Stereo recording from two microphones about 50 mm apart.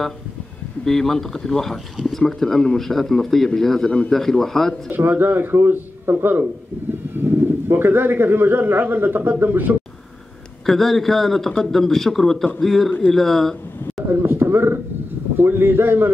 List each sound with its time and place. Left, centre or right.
0.8 s speech: centre
4.9 s speech: right
10.6 s speech: centre
14.0 s a sound: right
15.3 s speech: right